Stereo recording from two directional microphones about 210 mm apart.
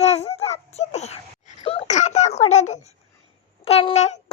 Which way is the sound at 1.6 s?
30° left (ahead or behind).